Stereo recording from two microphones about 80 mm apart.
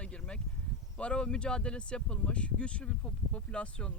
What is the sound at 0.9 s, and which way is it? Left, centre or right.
Speech, centre.